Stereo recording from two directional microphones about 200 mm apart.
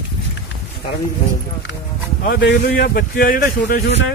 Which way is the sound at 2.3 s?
60° left (ahead or behind).